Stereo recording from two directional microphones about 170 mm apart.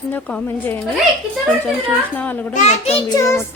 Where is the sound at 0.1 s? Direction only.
10° left (ahead or behind).